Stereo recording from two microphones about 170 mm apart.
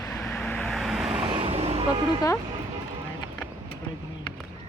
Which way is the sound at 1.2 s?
30° right (ahead or behind).